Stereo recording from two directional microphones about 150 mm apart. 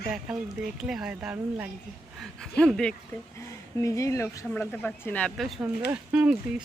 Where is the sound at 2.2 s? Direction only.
5° left (ahead or behind).